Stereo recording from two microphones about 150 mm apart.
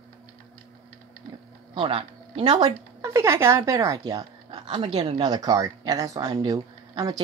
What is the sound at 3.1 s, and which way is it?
Speech, 20° right (ahead or behind).